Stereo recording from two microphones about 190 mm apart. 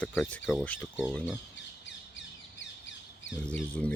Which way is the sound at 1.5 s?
70° left (ahead or behind).